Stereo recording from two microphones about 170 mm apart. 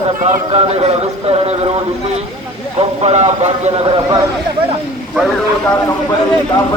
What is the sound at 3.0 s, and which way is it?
A man's voice, 40° right (ahead or behind).